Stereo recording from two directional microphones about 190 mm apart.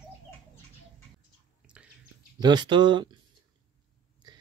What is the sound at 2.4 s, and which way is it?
Speech, 25° right (ahead or behind).